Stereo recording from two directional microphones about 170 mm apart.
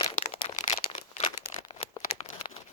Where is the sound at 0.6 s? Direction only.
40° left (ahead or behind).